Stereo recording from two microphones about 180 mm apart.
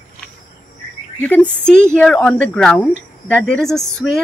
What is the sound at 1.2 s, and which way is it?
Speech, 10° left (ahead or behind).